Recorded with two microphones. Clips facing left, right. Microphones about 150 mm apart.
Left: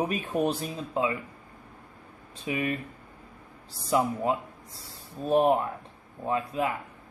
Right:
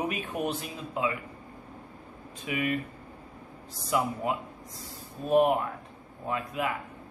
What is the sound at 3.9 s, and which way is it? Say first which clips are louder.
Speech: left 3 dB; 30° left (ahead or behind).